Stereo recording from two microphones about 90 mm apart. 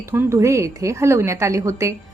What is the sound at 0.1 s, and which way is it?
A woman's voice, 30° right (ahead or behind).